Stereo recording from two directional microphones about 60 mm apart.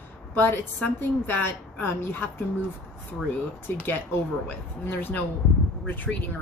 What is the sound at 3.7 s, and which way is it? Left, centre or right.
A woman's voice, left.